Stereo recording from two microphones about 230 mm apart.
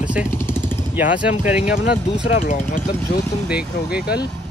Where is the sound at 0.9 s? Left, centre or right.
Centre.